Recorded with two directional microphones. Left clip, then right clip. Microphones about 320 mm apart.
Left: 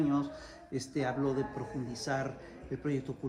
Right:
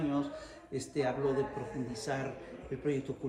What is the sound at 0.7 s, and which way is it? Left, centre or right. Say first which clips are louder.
Speech: right 1 dB; centre.